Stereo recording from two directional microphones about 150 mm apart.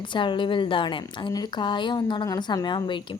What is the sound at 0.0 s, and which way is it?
A woman's voice, 30° left (ahead or behind).